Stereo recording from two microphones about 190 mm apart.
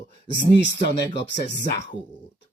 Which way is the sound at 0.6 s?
65° left (ahead or behind).